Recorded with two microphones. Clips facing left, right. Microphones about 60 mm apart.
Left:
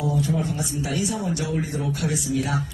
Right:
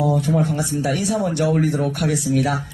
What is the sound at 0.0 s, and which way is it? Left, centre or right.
Speech, right.